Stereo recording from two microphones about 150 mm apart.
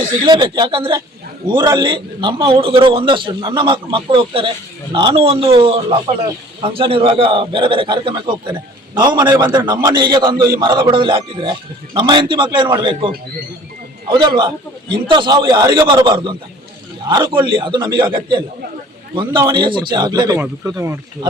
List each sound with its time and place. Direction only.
0.3 s a man's voice: 30° right (ahead or behind)